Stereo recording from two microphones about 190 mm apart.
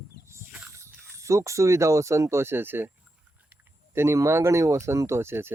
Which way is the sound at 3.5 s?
15° right (ahead or behind).